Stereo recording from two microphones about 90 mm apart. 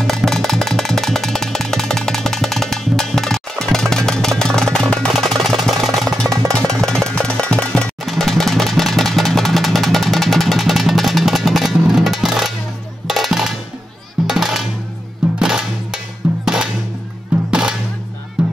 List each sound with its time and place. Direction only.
0.0 s music: 5° left (ahead or behind)
8.0 s vehicle: centre (ahead or behind)
13.0 s music: 5° right (ahead or behind)
17.5 s music: 10° right (ahead or behind)